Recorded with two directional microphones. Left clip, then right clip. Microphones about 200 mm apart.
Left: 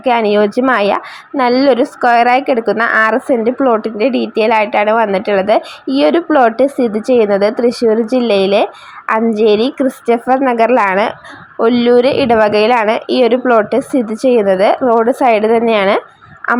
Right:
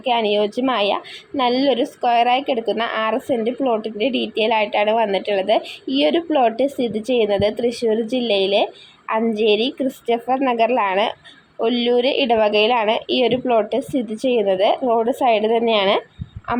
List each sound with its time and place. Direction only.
0.0 s speech: 15° left (ahead or behind)